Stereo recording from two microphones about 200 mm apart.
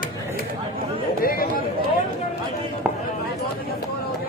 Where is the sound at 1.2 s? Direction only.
45° left (ahead or behind).